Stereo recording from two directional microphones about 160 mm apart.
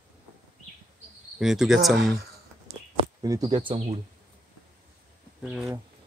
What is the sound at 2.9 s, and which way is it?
Speech, 25° right (ahead or behind).